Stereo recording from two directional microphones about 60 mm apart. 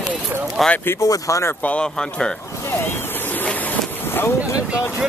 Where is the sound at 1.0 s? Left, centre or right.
Left.